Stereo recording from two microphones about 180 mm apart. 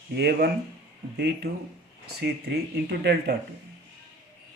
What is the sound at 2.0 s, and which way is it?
Speech, 60° right (ahead or behind).